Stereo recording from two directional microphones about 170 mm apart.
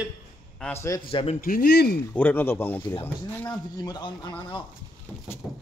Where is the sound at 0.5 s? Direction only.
10° left (ahead or behind).